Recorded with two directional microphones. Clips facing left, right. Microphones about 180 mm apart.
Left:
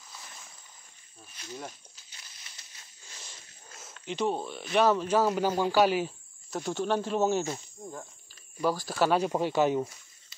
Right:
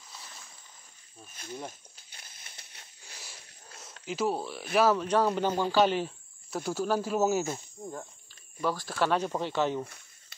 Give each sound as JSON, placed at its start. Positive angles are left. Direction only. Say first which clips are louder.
{"t": 1.3, "sound": "speech", "louder": "right 1 dB", "side_deg": -50}
{"t": 1.7, "sound": "snake", "louder": "right 1 dB", "side_deg": -55}
{"t": 3.7, "sound": "speech", "louder": "even", "side_deg": 0}
{"t": 6.5, "sound": "speech", "louder": "even", "side_deg": -5}
{"t": 8.6, "sound": "speech", "louder": "left 2 dB", "side_deg": 5}